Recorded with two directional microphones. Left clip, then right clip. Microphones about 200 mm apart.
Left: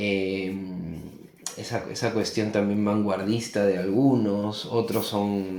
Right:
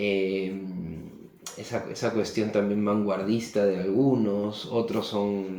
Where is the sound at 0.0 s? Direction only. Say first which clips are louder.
Even; 40° left (ahead or behind).